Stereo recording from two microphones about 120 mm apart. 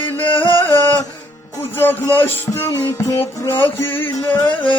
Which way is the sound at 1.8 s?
15° left (ahead or behind).